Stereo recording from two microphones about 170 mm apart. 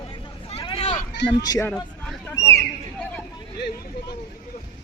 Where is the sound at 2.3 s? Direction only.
20° left (ahead or behind).